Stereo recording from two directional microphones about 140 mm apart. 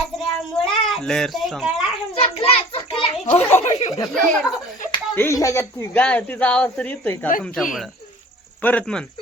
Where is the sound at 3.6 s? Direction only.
55° left (ahead or behind).